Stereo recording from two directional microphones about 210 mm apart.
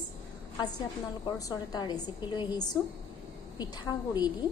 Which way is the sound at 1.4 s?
15° left (ahead or behind).